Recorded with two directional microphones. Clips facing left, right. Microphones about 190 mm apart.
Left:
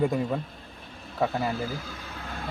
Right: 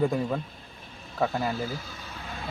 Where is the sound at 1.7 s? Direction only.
55° left (ahead or behind).